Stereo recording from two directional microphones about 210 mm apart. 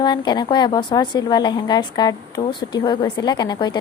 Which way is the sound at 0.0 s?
20° left (ahead or behind).